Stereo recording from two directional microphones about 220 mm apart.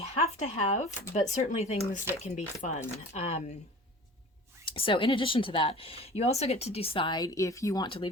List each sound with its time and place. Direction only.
0.0 s a sound: 30° left (ahead or behind)
1.1 s speech: 30° left (ahead or behind)
2.6 s chopping: 30° left (ahead or behind)
3.1 s speech: 30° left (ahead or behind)
4.6 s speech: 25° left (ahead or behind)